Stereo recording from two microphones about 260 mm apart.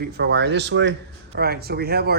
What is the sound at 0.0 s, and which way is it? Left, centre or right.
Speech, right.